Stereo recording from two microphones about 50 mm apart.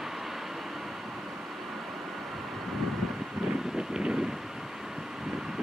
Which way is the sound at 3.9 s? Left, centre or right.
Centre.